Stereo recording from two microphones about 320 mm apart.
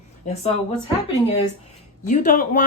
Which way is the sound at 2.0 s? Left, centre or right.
Left.